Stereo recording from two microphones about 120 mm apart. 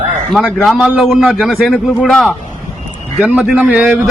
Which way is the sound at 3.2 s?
10° right (ahead or behind).